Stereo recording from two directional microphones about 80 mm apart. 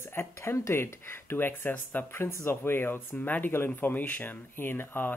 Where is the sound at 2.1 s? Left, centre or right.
Left.